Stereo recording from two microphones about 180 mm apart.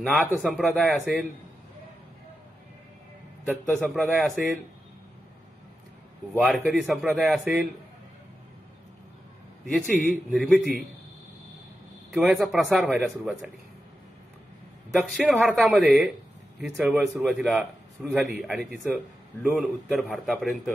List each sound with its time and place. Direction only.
0.1 s a man's voice: 5° left (ahead or behind)
3.4 s a man's voice: centre (ahead or behind)
6.3 s a man's voice: centre (ahead or behind)
9.8 s a man's voice: centre (ahead or behind)
12.1 s a man's voice: 5° right (ahead or behind)
15.0 s a man's voice: 5° right (ahead or behind)